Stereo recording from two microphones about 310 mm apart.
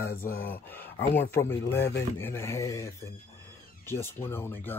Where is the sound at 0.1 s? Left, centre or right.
Left.